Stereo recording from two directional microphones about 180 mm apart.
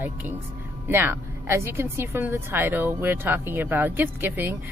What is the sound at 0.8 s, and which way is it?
A woman's voice, 10° right (ahead or behind).